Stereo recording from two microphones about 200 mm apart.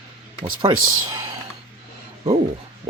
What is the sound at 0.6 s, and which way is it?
Speech, 20° right (ahead or behind).